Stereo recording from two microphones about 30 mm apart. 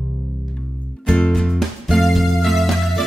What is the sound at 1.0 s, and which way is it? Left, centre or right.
Music, left.